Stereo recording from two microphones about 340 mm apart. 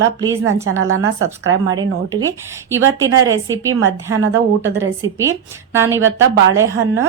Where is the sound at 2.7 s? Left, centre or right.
Centre.